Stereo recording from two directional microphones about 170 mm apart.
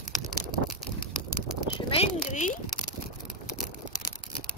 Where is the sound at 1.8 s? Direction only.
40° left (ahead or behind).